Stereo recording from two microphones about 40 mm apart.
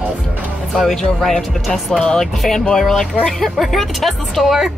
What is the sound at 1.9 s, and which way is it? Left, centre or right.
Speech, left.